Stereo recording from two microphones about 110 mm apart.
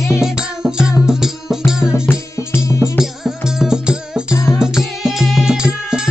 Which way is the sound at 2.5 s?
25° left (ahead or behind).